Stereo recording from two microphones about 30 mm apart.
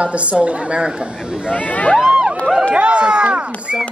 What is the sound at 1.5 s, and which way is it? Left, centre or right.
Speech, left.